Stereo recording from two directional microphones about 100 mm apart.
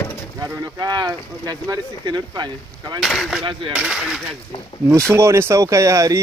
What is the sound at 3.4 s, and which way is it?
Speech, 55° right (ahead or behind).